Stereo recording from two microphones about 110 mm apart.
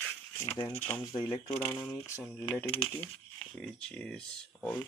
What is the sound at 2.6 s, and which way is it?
Speech, 60° left (ahead or behind).